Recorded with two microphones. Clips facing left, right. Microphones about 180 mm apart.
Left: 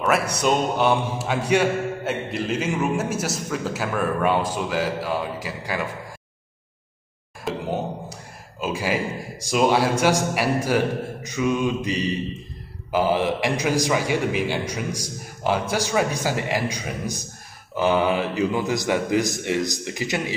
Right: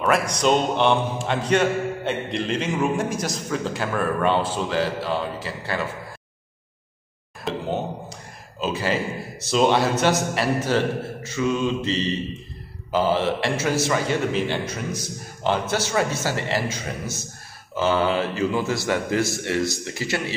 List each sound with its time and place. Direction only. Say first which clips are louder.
0.0 s a man's voice: right 1 dB; 5° left (ahead or behind)
7.4 s a man's voice: even; 10° left (ahead or behind)